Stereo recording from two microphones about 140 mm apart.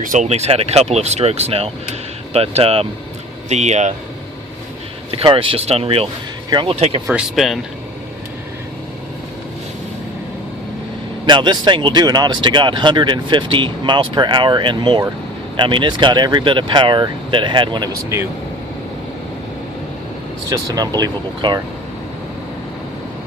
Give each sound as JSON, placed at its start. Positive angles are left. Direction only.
{"t": 0.0, "sound": "speech", "side_deg": -65}
{"t": 0.3, "sound": "speech", "side_deg": -50}
{"t": 5.1, "sound": "speech", "side_deg": -40}
{"t": 6.7, "sound": "speech", "side_deg": -50}
{"t": 7.1, "sound": "speech", "side_deg": -5}
{"t": 11.3, "sound": "speech", "side_deg": -35}
{"t": 20.5, "sound": "speech", "side_deg": -25}